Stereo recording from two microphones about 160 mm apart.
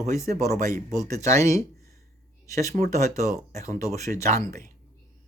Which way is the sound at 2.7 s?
45° right (ahead or behind).